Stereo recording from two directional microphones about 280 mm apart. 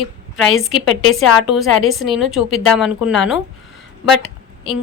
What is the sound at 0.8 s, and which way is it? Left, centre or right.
Speech, left.